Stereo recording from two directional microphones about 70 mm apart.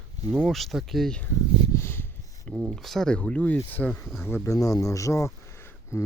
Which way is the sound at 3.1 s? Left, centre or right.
Centre.